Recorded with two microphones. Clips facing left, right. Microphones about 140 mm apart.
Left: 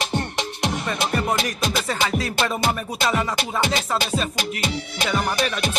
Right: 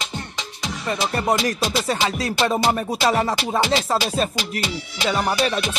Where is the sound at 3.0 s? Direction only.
40° right (ahead or behind).